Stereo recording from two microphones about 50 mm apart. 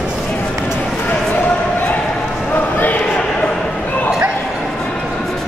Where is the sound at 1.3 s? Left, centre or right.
Left.